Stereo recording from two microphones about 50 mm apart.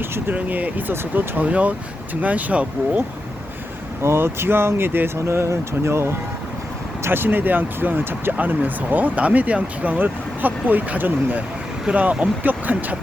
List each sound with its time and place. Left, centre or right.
0.0 s speech: right
0.3 s speech: right
1.5 s speech: right
4.0 s speech: right
7.0 s speech: right